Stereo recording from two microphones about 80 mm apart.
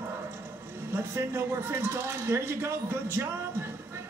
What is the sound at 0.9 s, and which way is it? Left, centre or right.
Speech, right.